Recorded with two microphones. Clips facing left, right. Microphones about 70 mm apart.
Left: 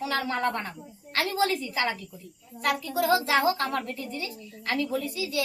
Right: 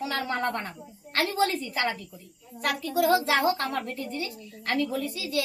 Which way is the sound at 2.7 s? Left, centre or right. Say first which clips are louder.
Right 5 dB; right.